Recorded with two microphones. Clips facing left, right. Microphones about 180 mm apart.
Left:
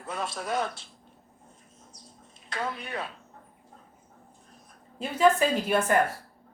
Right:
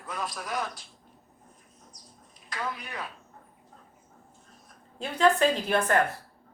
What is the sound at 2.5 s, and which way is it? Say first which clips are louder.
Speech: left 2 dB; 25° left (ahead or behind).